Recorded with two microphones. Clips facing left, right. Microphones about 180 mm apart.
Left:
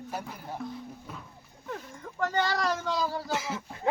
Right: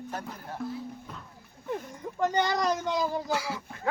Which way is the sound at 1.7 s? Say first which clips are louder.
Right 5 dB; 20° right (ahead or behind).